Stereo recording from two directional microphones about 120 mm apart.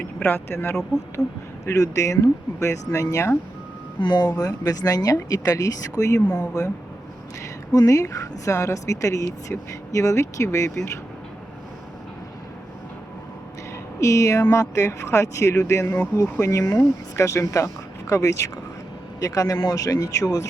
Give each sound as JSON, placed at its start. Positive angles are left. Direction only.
{"t": 0.2, "sound": "speech", "side_deg": 15}
{"t": 1.2, "sound": "speech", "side_deg": 5}
{"t": 1.6, "sound": "speech", "side_deg": 25}
{"t": 4.0, "sound": "speech", "side_deg": 40}
{"t": 6.1, "sound": "speech", "side_deg": 15}
{"t": 7.7, "sound": "speech", "side_deg": 30}
{"t": 14.0, "sound": "speech", "side_deg": 25}